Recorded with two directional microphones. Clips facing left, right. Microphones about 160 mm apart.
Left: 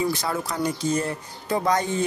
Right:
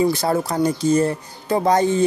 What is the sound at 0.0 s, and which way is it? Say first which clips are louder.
Speech: right 7 dB; 35° right (ahead or behind).